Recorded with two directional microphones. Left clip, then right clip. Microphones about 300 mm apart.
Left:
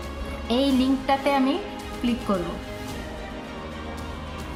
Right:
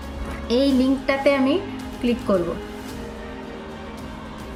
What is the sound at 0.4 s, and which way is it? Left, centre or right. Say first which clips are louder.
Speech: right 3 dB; centre.